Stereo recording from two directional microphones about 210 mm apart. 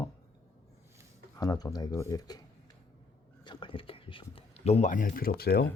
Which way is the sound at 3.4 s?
25° left (ahead or behind).